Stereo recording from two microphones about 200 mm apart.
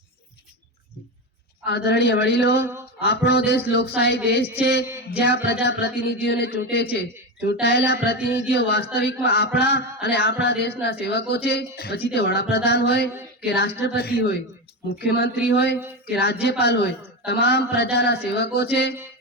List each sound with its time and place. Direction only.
1.6 s a man's voice: 55° left (ahead or behind)